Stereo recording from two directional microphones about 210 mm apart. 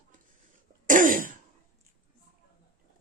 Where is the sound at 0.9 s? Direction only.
40° right (ahead or behind).